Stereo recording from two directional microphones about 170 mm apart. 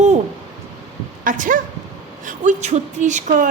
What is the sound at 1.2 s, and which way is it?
A woman's voice, 50° right (ahead or behind).